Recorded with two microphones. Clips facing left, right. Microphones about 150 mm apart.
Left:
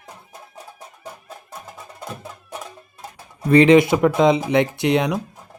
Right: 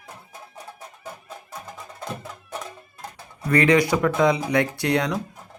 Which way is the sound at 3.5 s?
25° left (ahead or behind).